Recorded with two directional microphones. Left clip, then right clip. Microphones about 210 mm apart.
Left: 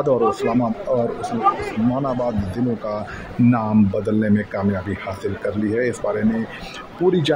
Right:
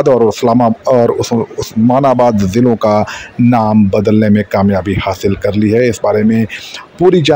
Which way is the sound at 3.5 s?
30° right (ahead or behind).